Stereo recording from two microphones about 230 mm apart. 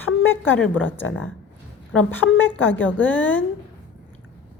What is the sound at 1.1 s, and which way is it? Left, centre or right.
Speech, left.